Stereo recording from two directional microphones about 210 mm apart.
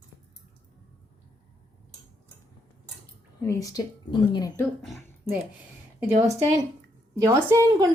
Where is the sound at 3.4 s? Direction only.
15° left (ahead or behind).